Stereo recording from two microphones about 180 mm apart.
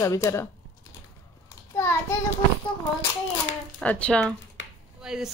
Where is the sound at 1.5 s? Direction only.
15° left (ahead or behind).